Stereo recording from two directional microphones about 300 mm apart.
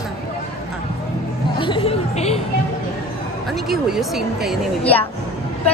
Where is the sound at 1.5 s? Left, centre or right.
Centre.